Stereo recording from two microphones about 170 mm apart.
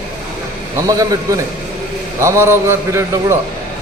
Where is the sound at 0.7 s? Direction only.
20° right (ahead or behind).